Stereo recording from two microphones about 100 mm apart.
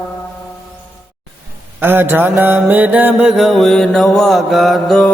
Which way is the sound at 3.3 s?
Centre (ahead or behind).